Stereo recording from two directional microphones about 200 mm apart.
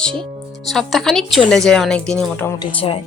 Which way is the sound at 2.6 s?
25° left (ahead or behind).